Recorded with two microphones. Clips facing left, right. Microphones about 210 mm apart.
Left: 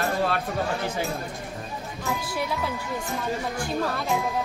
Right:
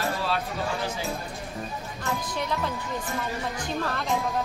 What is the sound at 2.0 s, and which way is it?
Speech, 10° left (ahead or behind).